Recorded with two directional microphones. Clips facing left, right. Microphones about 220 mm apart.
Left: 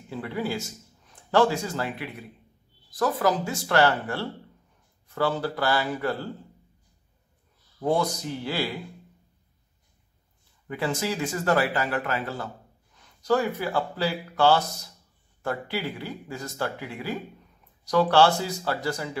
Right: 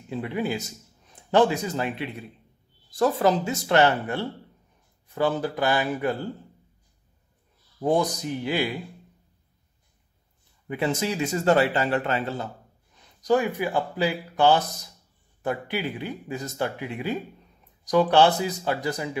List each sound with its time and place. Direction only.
0.1 s speech: 20° right (ahead or behind)
7.8 s speech: 15° right (ahead or behind)
10.7 s speech: 20° right (ahead or behind)